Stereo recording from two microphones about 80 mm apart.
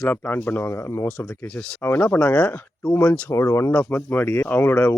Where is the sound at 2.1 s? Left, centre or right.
Centre.